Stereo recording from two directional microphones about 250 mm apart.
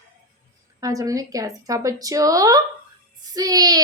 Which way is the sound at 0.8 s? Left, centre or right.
Centre.